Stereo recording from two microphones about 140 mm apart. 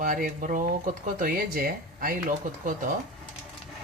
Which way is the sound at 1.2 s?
85° right.